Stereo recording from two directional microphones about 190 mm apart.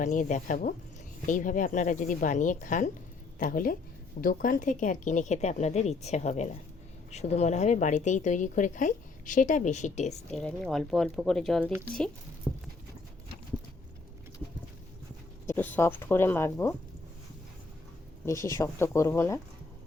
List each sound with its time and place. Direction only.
0.0 s speech: 40° left (ahead or behind)
10.3 s speech: centre (ahead or behind)
12.5 s clip-clop: centre (ahead or behind)
15.4 s speech: 10° left (ahead or behind)
18.3 s speech: 15° left (ahead or behind)